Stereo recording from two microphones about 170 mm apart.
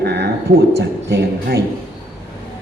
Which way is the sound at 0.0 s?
80° right.